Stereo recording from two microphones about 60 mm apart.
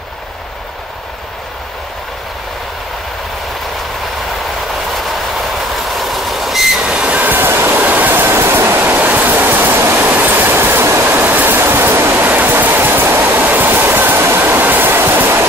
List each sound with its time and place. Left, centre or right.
4.9 s train: centre
6.8 s train: centre
7.4 s train: right
8.8 s a sound: right
9.9 s train: right
11.1 s a sound: right
13.5 s train: right